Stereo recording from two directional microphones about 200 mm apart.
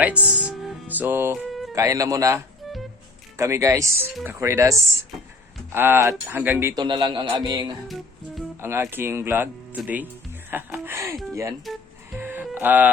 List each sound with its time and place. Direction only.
0.0 s music: 5° right (ahead or behind)
1.5 s music: centre (ahead or behind)
1.7 s speech: 15° right (ahead or behind)
2.6 s music: centre (ahead or behind)
3.3 s speech: 15° right (ahead or behind)
6.8 s a man's voice: 25° right (ahead or behind)
7.9 s music: centre (ahead or behind)
8.6 s speech: 10° right (ahead or behind)
11.6 s music: centre (ahead or behind)
12.2 s music: 10° right (ahead or behind)